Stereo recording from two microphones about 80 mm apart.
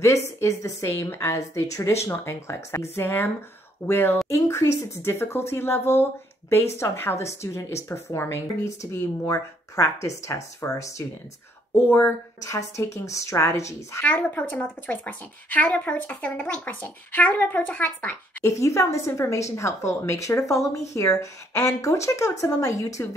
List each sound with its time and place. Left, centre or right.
0.0 s speech: left
14.0 s speech: left
18.4 s speech: left